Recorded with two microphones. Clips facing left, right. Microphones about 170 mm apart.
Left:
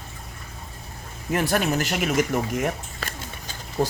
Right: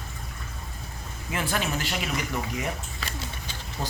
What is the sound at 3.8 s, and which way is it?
Speech, 40° left (ahead or behind).